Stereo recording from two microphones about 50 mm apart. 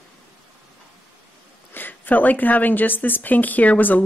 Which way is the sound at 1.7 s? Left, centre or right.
Left.